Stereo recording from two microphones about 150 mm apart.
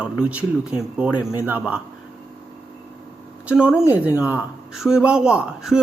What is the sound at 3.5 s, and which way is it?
A man's voice, 5° right (ahead or behind).